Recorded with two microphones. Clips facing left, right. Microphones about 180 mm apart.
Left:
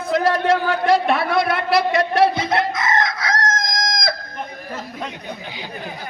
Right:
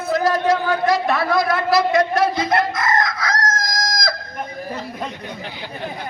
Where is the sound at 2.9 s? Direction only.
25° left (ahead or behind).